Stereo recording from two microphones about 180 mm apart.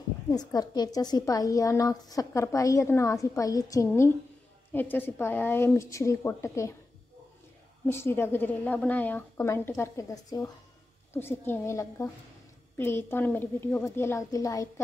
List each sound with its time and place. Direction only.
0.3 s a woman's voice: 20° left (ahead or behind)
7.9 s a woman's voice: 15° left (ahead or behind)